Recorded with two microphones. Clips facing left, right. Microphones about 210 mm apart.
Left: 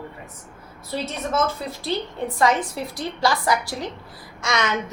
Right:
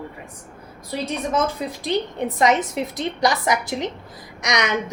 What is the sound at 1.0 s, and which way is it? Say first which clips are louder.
A woman's voice: right 2 dB; 15° right (ahead or behind).